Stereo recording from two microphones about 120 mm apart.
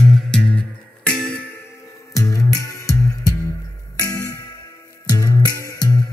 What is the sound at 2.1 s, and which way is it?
Music, 30° left (ahead or behind).